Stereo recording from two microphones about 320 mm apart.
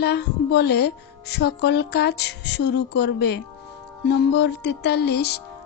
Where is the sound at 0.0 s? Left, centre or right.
Left.